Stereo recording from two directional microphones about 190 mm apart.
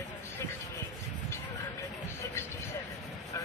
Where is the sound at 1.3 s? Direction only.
15° left (ahead or behind).